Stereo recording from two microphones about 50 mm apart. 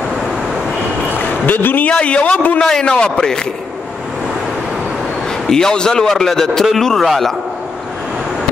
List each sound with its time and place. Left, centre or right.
1.4 s a man's voice: left
1.9 s a man's voice: left
2.6 s a man's voice: centre
5.5 s a man's voice: centre